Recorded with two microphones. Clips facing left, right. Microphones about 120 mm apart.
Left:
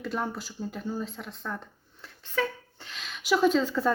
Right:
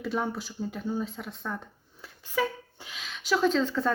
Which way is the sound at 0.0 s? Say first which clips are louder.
Right 2 dB; centre (ahead or behind).